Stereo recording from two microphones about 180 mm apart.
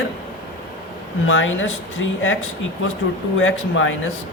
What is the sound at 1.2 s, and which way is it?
Speech, 90° left.